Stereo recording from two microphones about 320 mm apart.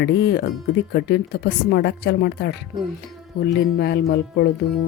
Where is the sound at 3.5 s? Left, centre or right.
Left.